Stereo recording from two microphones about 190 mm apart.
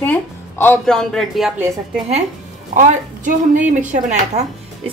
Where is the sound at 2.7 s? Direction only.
40° right (ahead or behind).